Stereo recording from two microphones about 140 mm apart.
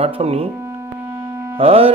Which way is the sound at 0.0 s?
45° right (ahead or behind).